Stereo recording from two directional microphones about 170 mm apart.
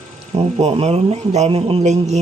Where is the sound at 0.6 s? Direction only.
40° right (ahead or behind).